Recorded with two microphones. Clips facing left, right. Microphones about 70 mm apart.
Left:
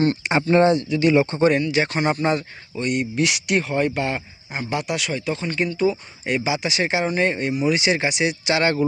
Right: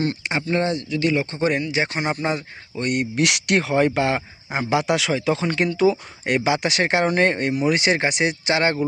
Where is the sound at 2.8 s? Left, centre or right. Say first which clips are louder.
Even; right.